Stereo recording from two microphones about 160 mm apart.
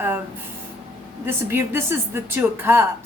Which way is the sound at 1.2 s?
15° right (ahead or behind).